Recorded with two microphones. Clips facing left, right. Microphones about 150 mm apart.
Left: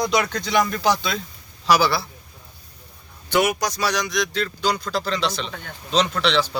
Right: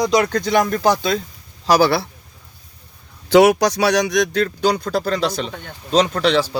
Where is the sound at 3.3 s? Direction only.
90° right; by 6.5 s 45° right (ahead or behind).